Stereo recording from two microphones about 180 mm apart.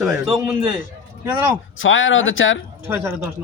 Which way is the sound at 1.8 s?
90° left.